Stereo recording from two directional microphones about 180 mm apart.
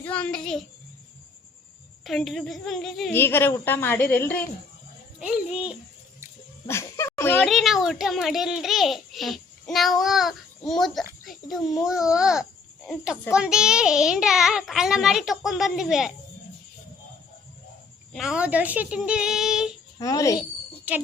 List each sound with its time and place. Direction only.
0.0 s a child's voice: 5° left (ahead or behind)
2.0 s a child's voice: centre (ahead or behind)
3.2 s a woman's voice: 10° left (ahead or behind)
5.2 s a child's voice: 5° right (ahead or behind)
6.7 s a sound: 15° left (ahead or behind)
7.4 s a child's voice: centre (ahead or behind)
18.1 s a child's voice: centre (ahead or behind)
20.0 s a child's voice: 20° left (ahead or behind)
20.9 s jingle: 10° right (ahead or behind)